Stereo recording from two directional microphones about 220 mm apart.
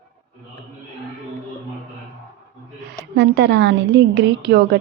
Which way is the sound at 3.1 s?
50° right (ahead or behind).